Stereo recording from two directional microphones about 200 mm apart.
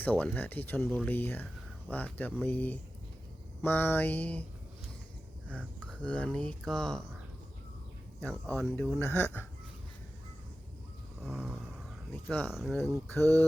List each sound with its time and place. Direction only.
0.0 s speech: 10° left (ahead or behind)
6.0 s speech: 5° left (ahead or behind)
8.2 s speech: 5° left (ahead or behind)
11.2 s a sound: centre (ahead or behind)
12.1 s speech: 5° left (ahead or behind)
13.1 s speech: 10° left (ahead or behind)